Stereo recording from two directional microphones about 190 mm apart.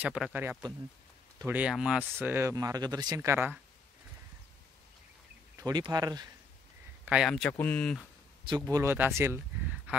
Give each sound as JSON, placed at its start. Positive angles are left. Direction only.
{"t": 0.0, "sound": "speech", "side_deg": -5}
{"t": 5.6, "sound": "speech", "side_deg": -20}
{"t": 7.1, "sound": "speech", "side_deg": 0}
{"t": 8.5, "sound": "speech", "side_deg": -20}